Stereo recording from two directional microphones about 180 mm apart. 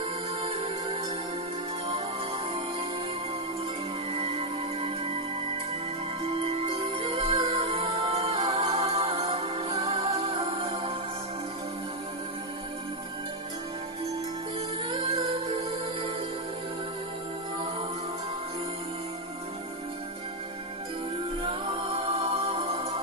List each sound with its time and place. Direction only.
0.0 s music: 30° right (ahead or behind)
4.1 s music: 35° right (ahead or behind)
6.2 s music: 35° right (ahead or behind)
14.8 s music: 35° right (ahead or behind)
21.4 s music: 35° right (ahead or behind)